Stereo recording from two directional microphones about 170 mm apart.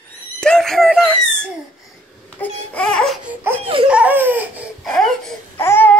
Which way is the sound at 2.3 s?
5° left (ahead or behind).